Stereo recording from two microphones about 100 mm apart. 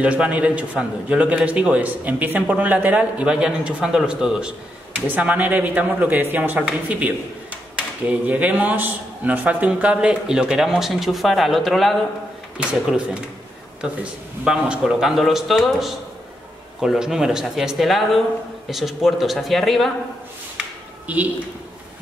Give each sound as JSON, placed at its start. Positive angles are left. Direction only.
{"t": 0.0, "sound": "a man's voice", "side_deg": -10}
{"t": 14.4, "sound": "speech", "side_deg": -10}
{"t": 21.1, "sound": "a man's voice", "side_deg": -15}